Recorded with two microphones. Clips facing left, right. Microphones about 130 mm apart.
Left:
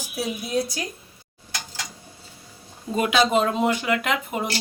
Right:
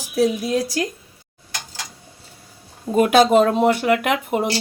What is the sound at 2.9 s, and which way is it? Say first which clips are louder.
Speech: right 7 dB; 45° right (ahead or behind).